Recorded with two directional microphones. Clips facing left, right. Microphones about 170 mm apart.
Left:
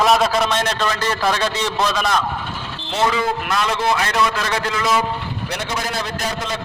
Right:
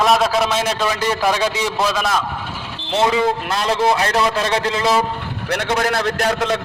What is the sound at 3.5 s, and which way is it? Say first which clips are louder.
A man's voice: right 2 dB; 30° right (ahead or behind).